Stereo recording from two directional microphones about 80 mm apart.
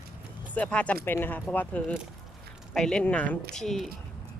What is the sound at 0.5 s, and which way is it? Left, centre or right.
Speech, centre.